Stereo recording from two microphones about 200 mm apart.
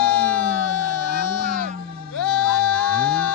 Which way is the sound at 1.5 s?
40° right (ahead or behind).